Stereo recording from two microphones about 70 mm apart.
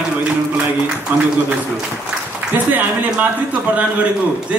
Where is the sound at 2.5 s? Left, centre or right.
Right.